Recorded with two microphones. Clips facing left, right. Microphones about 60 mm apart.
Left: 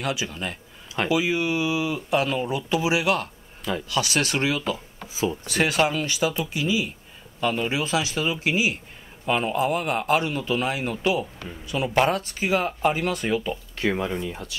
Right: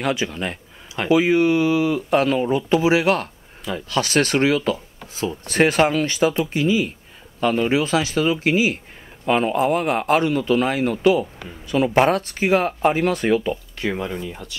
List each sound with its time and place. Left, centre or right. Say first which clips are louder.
0.0 s a man's voice: right 5 dB; right
4.7 s speech: even; centre
5.5 s a man's voice: right 7 dB; right
13.7 s speech: even; centre